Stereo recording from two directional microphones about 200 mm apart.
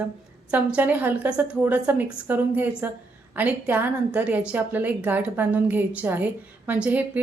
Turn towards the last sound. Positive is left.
turn(degrees=-10)  # may be behind; listen again after turning